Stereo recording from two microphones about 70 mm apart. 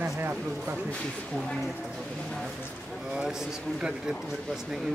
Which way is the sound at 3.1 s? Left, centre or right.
Centre.